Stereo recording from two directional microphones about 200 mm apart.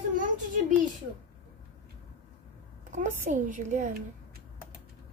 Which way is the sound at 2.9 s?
40° right (ahead or behind).